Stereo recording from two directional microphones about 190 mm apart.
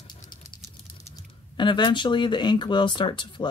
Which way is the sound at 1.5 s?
25° left (ahead or behind).